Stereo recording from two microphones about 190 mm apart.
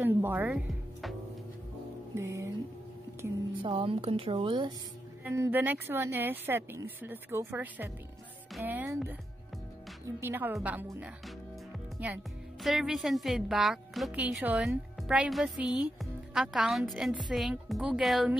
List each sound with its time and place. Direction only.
0.0 s speech: 10° right (ahead or behind)
2.1 s speech: 15° right (ahead or behind)
3.6 s a woman's voice: 30° right (ahead or behind)
5.2 s a woman's voice: 10° right (ahead or behind)